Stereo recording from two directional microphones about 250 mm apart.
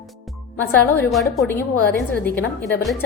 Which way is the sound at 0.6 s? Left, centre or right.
Centre.